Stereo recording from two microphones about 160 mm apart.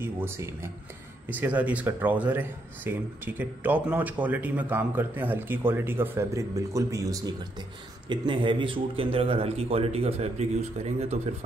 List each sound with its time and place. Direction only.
0.0 s a man's voice: 15° right (ahead or behind); by 11.1 s 45° right (ahead or behind)